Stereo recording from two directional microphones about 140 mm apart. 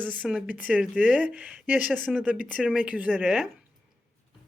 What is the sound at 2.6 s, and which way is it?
Speech, 5° right (ahead or behind).